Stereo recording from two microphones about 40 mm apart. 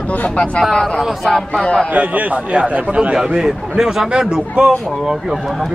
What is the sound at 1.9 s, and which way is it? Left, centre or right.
A man's voice, right.